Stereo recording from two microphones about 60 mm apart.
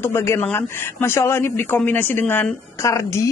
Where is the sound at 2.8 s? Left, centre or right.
Left.